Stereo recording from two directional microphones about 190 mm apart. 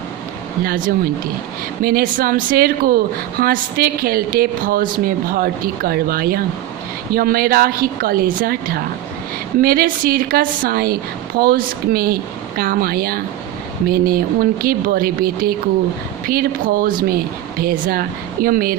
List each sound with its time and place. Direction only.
0.6 s a woman's voice: 50° right (ahead or behind)